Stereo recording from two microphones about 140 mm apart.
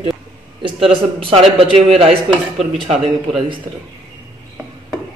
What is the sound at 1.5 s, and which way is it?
A man's voice, 45° right (ahead or behind).